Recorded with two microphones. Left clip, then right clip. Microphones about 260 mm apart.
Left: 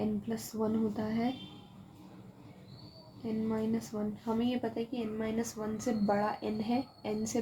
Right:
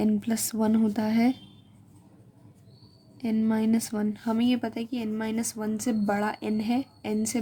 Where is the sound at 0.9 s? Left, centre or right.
Right.